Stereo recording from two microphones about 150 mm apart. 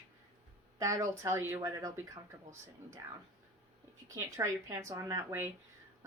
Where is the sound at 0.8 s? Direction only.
20° right (ahead or behind).